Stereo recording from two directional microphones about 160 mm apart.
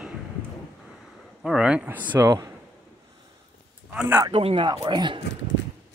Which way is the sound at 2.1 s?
20° right (ahead or behind).